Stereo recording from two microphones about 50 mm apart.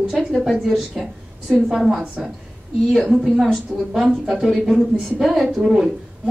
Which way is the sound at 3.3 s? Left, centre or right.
Centre.